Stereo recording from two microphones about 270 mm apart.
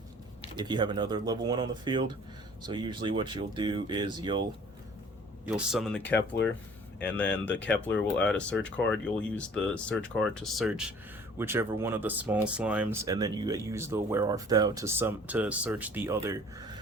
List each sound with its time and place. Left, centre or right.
0.5 s speech: centre
5.5 s speech: centre
7.0 s speech: centre